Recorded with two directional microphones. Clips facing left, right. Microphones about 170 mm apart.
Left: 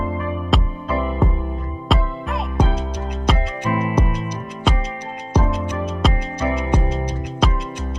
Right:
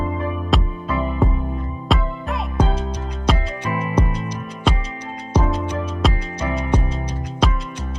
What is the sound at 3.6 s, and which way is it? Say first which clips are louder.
Music: left 3 dB; 15° left (ahead or behind).